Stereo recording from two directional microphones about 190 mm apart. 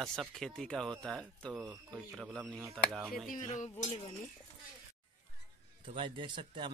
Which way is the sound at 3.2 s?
40° left (ahead or behind).